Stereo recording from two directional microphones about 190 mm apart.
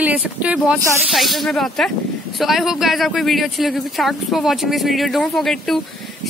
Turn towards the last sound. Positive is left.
turn(degrees=0)  # may be behind; listen again after turning